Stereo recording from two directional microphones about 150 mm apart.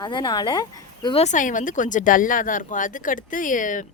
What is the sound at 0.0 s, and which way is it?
Speech, 30° left (ahead or behind).